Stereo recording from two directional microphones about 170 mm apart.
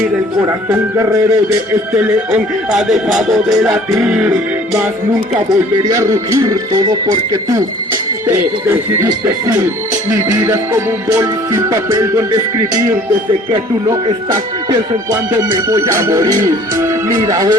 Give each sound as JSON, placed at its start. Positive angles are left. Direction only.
{"t": 0.7, "sound": "music", "side_deg": -15}
{"t": 5.9, "sound": "speech", "side_deg": -20}
{"t": 9.0, "sound": "speech", "side_deg": -20}
{"t": 10.2, "sound": "music", "side_deg": -15}
{"t": 11.7, "sound": "speech", "side_deg": -20}
{"t": 13.8, "sound": "speech", "side_deg": -20}